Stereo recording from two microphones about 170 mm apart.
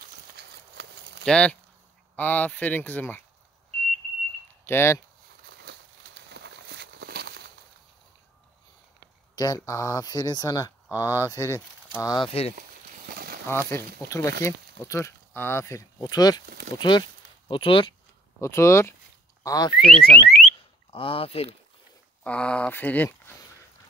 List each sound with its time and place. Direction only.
0.4 s clip-clop: 85° right
1.2 s speech: 5° left (ahead or behind)
4.6 s speech: 15° left (ahead or behind)
6.3 s walk: 85° right; by 7.3 s 70° right (ahead or behind)
9.3 s speech: 20° left (ahead or behind)
12.3 s speech: 35° left (ahead or behind)
13.1 s a sound: 60° right (ahead or behind)
13.5 s speech: 15° left (ahead or behind); by 17.9 s 30° left (ahead or behind)
18.4 s speech: 15° left (ahead or behind)
20.1 s alarm: 5° left (ahead or behind)
20.9 s speech: 30° left (ahead or behind)
22.2 s speech: 5° left (ahead or behind)